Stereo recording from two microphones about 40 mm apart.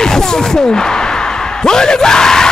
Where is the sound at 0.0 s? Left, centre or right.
Centre.